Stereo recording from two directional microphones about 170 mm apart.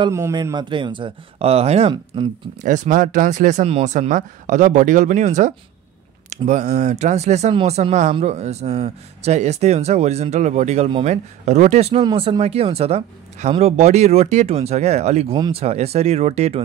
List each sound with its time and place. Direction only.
0.1 s speech: 20° right (ahead or behind)
2.6 s speech: 50° right (ahead or behind)
12.0 s speech: 30° right (ahead or behind)